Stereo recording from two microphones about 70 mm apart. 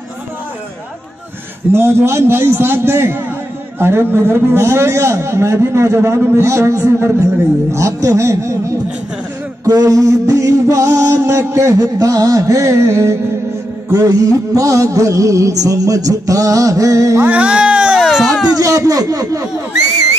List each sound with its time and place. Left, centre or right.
1.7 s a man's voice: right
7.7 s music: right
14.0 s music: right
17.2 s a sound: centre
18.6 s speech: right